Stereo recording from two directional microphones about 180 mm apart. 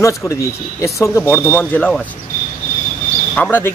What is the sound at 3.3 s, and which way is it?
Speech, 10° left (ahead or behind).